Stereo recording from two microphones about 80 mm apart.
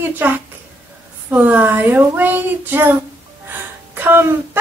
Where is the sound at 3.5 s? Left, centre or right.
Right.